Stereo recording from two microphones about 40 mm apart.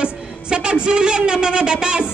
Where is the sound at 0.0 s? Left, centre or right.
Right.